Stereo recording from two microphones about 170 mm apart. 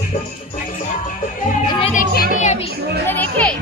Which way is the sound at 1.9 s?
50° left (ahead or behind).